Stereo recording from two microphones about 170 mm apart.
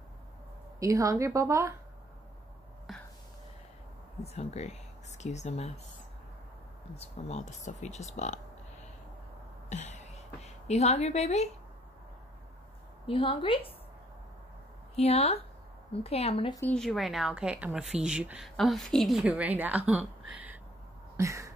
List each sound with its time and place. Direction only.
0.7 s a woman's voice: 20° right (ahead or behind)
2.9 s a sound: centre (ahead or behind)
4.2 s speech: 40° left (ahead or behind)
7.0 s speech: 40° left (ahead or behind)
9.7 s a sound: 45° left (ahead or behind)
13.0 s speech: 30° left (ahead or behind)
15.0 s speech: 35° left (ahead or behind)
16.7 s a woman's voice: centre (ahead or behind)
21.2 s a sound: 20° right (ahead or behind)